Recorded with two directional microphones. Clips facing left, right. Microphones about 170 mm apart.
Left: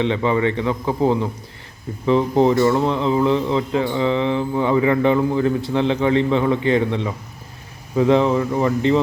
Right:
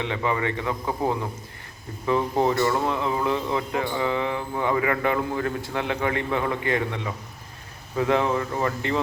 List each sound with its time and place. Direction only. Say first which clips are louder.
0.0 s speech: left 7 dB; 25° left (ahead or behind)